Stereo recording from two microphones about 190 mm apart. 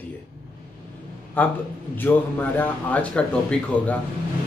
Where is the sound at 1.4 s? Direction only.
10° left (ahead or behind).